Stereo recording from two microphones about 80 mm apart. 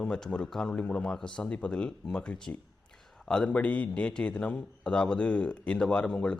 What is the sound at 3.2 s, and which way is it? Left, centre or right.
A man's voice, centre.